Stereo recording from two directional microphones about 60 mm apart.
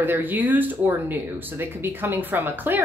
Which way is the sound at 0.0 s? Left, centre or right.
Right.